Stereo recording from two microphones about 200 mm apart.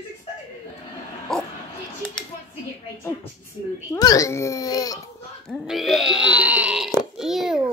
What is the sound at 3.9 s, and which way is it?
A child's voice, 15° left (ahead or behind).